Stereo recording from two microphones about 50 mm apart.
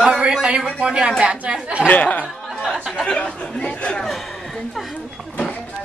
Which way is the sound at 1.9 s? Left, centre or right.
Left.